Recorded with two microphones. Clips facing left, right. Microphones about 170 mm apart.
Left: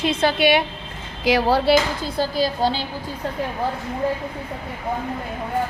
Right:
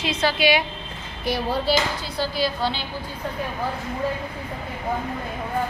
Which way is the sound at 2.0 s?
45° left (ahead or behind).